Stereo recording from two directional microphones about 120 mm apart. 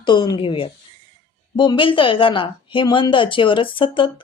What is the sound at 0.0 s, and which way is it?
Speech, 40° left (ahead or behind).